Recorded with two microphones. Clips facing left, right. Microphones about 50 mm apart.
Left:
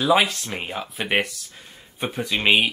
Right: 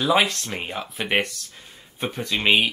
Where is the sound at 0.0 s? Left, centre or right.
Centre.